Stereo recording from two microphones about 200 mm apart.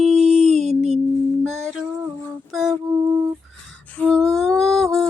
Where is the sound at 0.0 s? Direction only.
35° right (ahead or behind).